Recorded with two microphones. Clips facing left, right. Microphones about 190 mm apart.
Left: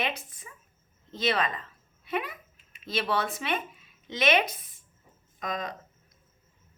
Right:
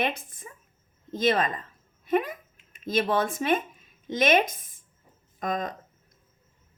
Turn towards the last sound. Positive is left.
turn(degrees=-50)  # may be behind; listen again after turning